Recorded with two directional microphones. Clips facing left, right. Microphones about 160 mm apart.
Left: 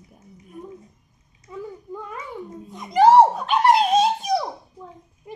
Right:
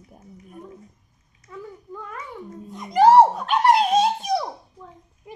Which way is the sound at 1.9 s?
20° left (ahead or behind).